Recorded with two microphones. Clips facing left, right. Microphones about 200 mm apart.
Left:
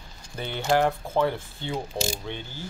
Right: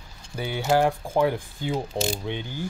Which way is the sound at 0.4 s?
10° right (ahead or behind).